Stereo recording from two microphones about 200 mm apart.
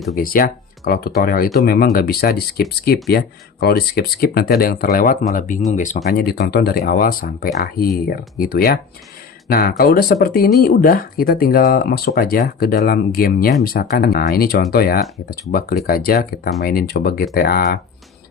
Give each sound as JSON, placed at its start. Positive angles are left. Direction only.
{"t": 0.2, "sound": "speech", "side_deg": 45}
{"t": 6.1, "sound": "speech", "side_deg": 55}